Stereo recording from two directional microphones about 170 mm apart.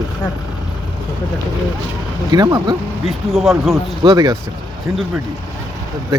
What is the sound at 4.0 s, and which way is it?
Speech, 25° right (ahead or behind).